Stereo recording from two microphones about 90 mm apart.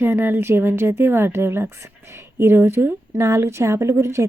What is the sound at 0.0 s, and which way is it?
A woman's voice, 25° right (ahead or behind).